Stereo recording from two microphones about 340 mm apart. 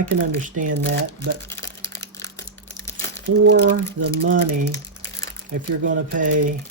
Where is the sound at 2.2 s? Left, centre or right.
Right.